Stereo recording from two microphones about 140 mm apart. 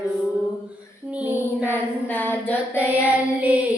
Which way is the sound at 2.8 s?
10° right (ahead or behind).